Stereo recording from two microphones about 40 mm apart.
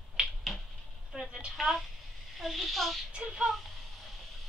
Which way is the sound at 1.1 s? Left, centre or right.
Centre.